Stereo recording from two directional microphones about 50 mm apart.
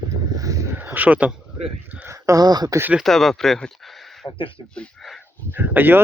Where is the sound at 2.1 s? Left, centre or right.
Right.